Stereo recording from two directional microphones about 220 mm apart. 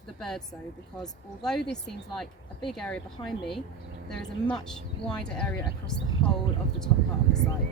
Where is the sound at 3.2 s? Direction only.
20° left (ahead or behind).